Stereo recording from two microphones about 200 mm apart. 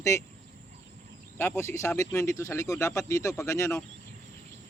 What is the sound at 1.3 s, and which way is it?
Speech, 10° left (ahead or behind).